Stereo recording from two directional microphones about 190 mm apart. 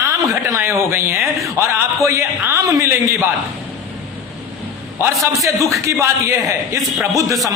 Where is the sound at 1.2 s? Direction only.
Centre (ahead or behind).